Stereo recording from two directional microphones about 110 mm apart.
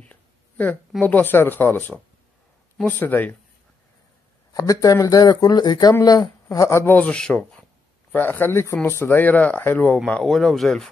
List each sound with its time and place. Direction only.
0.0 s speech: 15° left (ahead or behind)
4.6 s a woman's voice: 30° left (ahead or behind)
7.0 s speech: 10° left (ahead or behind)